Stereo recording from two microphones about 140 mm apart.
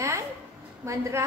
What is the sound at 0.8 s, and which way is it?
Speech, 20° right (ahead or behind).